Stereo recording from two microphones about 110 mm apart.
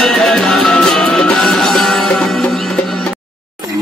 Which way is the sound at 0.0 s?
5° left (ahead or behind).